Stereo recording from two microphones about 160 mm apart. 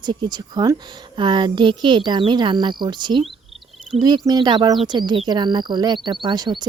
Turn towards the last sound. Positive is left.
turn(degrees=-30)  # may be behind; listen again after turning